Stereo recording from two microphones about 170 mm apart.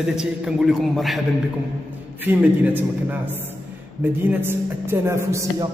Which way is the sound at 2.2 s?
10° right (ahead or behind).